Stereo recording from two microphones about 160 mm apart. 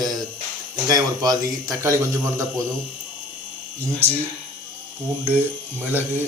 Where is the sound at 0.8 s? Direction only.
25° right (ahead or behind).